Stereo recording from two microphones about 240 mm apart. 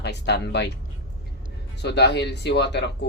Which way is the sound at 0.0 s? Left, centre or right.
Left.